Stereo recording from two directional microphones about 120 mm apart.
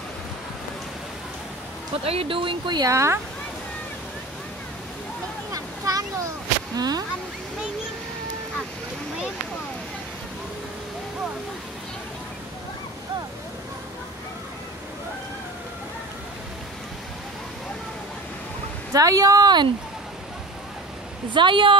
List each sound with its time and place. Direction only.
2.0 s speech: 50° right (ahead or behind); by 3.2 s 25° right (ahead or behind)
5.5 s a sound: 30° right (ahead or behind)
6.8 s speech: 35° right (ahead or behind)
18.9 s speech: 30° right (ahead or behind)
21.3 s speech: 40° right (ahead or behind)